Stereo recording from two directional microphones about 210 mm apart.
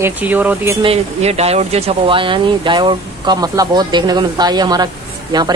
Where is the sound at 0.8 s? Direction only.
30° right (ahead or behind).